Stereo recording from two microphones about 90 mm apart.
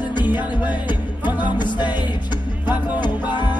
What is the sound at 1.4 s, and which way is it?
Music, 55° left (ahead or behind).